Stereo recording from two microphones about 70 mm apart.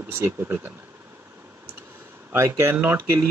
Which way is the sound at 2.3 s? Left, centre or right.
Right.